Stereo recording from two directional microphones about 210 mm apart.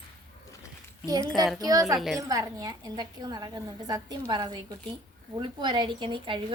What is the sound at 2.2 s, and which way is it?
A woman's voice, 15° right (ahead or behind).